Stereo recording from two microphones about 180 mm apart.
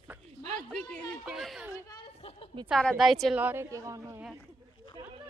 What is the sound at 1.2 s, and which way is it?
Speech, centre (ahead or behind).